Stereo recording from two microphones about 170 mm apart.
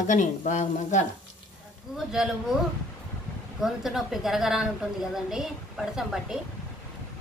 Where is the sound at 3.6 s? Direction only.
5° right (ahead or behind).